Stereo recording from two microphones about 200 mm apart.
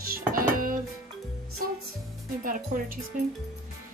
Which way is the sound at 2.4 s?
45° right (ahead or behind).